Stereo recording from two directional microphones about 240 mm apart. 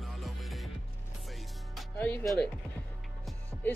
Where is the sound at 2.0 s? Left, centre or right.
Centre.